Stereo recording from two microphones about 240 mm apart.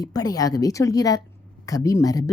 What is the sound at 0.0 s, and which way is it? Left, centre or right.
Speech, centre.